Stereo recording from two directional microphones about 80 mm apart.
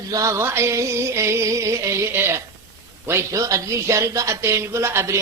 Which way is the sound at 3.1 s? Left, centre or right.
Right.